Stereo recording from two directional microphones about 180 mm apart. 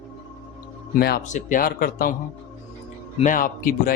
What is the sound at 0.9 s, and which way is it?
Speech, 60° left (ahead or behind).